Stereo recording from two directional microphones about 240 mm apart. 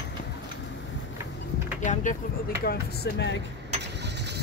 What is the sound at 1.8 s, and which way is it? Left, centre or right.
Speech, left.